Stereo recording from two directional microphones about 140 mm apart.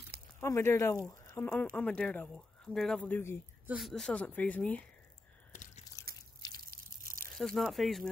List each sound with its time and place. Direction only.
0.4 s speech: 20° left (ahead or behind)
3.6 s a woman's voice: 5° right (ahead or behind)
3.9 s speech: 5° left (ahead or behind)
5.5 s biting: 60° left (ahead or behind)
6.7 s drip: 90° right
7.3 s speech: centre (ahead or behind)